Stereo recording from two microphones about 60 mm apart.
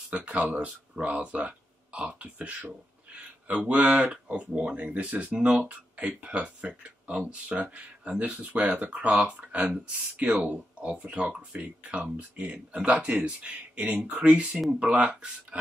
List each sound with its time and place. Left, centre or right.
0.1 s speech: centre